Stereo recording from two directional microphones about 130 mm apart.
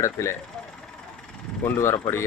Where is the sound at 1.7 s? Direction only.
20° left (ahead or behind).